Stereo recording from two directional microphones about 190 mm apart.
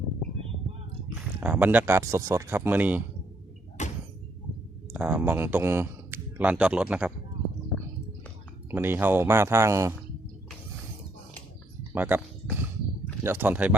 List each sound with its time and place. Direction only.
1.4 s speech: 10° right (ahead or behind)
3.8 s sliding door: 40° left (ahead or behind)
4.9 s speech: 10° right (ahead or behind)
8.7 s speech: 10° right (ahead or behind)
11.9 s speech: 10° right (ahead or behind)